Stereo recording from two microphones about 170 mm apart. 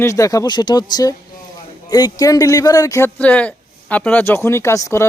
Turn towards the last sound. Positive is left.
turn(degrees=20)  # may be behind; listen again after turning